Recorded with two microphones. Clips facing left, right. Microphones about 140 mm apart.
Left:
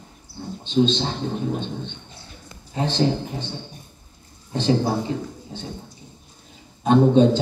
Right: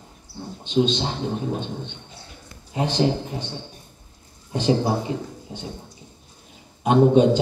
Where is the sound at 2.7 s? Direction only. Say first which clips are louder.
Even; 15° right (ahead or behind).